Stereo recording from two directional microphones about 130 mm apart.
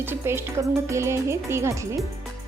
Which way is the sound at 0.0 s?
20° right (ahead or behind).